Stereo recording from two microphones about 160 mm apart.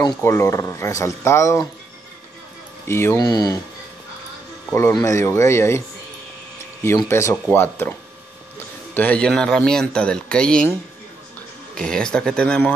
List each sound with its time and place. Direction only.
0.0 s speech: 15° left (ahead or behind)
2.9 s speech: 15° left (ahead or behind)
4.7 s speech: 20° left (ahead or behind)
7.1 s speech: 15° left (ahead or behind)
8.9 s speech: 10° left (ahead or behind)
11.7 s speech: 5° left (ahead or behind)